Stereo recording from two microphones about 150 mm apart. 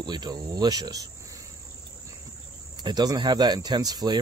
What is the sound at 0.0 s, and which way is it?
Speech, 30° right (ahead or behind).